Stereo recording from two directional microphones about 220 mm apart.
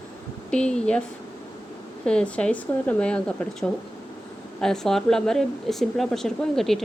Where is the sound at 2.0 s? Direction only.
5° left (ahead or behind).